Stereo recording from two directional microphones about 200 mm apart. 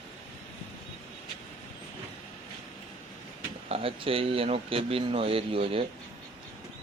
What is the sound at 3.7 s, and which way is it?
Speech, 30° right (ahead or behind).